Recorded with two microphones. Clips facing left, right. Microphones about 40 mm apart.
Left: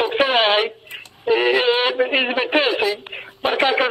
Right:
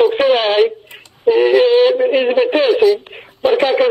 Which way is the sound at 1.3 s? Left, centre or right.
Centre.